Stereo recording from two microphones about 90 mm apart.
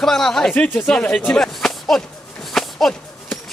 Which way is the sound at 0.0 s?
5° left (ahead or behind).